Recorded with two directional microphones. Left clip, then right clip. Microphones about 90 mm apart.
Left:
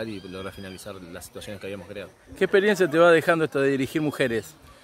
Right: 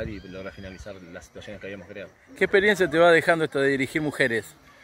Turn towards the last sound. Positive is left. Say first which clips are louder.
# right 1 dB
turn(degrees=5)  # may be behind; listen again after turning